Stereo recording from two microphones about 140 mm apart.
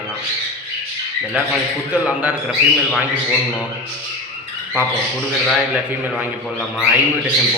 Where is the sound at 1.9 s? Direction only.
10° right (ahead or behind).